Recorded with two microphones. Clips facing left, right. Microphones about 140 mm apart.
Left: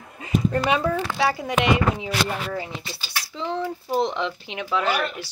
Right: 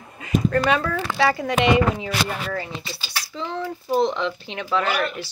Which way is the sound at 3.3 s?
20° left (ahead or behind).